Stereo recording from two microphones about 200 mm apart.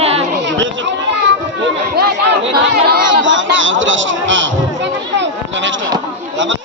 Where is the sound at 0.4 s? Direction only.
70° right (ahead or behind).